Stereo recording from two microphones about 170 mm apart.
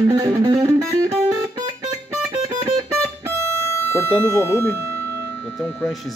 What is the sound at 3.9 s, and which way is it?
Speech, 15° left (ahead or behind).